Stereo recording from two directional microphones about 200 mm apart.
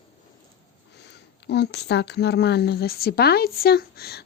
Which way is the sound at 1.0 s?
55° left (ahead or behind).